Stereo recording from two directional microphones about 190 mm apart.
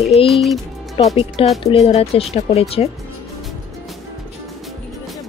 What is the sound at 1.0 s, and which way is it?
Speech, 25° left (ahead or behind).